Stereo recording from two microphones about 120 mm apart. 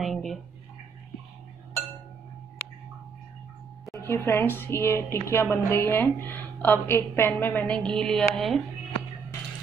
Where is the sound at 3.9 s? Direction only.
20° left (ahead or behind); by 8.6 s centre (ahead or behind).